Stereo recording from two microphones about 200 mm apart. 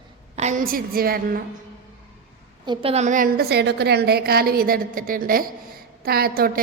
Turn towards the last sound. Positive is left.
turn(degrees=-50)  # may be behind; listen again after turning